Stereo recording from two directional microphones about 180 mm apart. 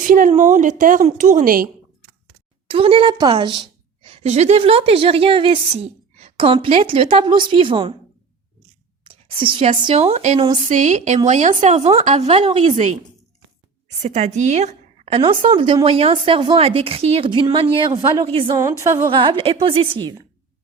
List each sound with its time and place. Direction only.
0.1 s a woman's voice: 45° right (ahead or behind)
2.6 s a woman's voice: 30° right (ahead or behind)
9.0 s a woman's voice: 30° right (ahead or behind)
14.0 s a woman's voice: 40° right (ahead or behind)
18.5 s a woman's voice: 15° right (ahead or behind)
19.1 s a woman's voice: 25° right (ahead or behind)